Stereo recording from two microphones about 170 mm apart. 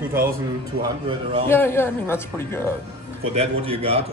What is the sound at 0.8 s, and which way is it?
Speech, 30° right (ahead or behind).